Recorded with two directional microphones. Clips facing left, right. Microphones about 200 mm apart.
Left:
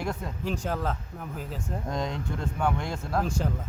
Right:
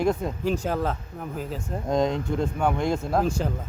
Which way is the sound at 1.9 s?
20° right (ahead or behind).